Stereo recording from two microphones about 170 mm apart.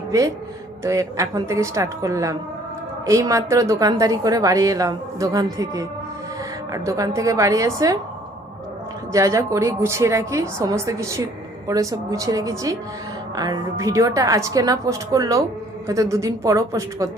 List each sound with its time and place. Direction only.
0.1 s a woman's voice: 20° right (ahead or behind)
9.1 s a woman's voice: 20° right (ahead or behind)